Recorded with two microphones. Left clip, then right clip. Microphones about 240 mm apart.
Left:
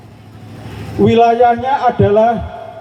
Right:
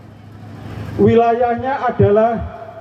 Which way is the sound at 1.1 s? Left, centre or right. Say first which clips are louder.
Left 6 dB; left.